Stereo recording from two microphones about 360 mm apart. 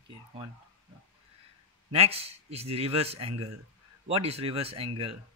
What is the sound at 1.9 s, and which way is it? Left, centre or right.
A man's voice, centre.